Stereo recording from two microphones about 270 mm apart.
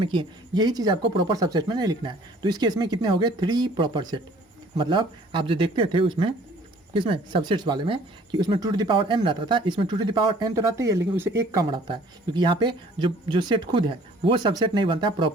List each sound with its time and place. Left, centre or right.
0.0 s speech: centre